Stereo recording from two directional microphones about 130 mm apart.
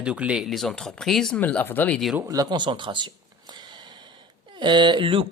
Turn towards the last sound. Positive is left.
turn(degrees=-40)  # may be behind; listen again after turning